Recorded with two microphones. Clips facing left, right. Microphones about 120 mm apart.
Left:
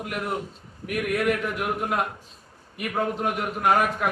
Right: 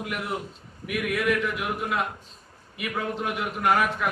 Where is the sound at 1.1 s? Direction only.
40° left (ahead or behind).